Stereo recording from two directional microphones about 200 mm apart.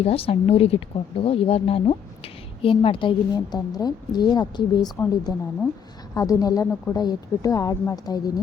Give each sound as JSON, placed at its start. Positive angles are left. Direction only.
{"t": 0.0, "sound": "a woman's voice", "side_deg": 30}